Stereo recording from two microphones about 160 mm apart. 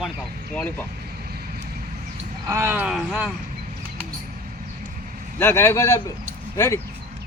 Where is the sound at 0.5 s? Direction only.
10° left (ahead or behind).